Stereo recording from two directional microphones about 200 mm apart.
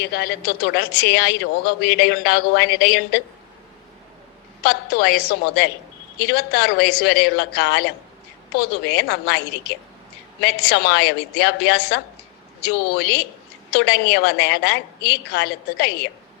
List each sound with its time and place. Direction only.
0.0 s a woman's voice: 50° left (ahead or behind)
4.6 s a woman's voice: 55° left (ahead or behind)